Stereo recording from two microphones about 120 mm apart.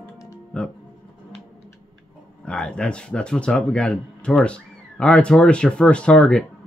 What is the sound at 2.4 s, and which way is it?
Speech, 10° left (ahead or behind).